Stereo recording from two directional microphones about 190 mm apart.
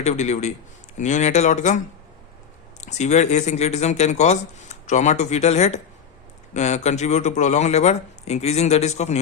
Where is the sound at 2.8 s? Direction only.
35° left (ahead or behind).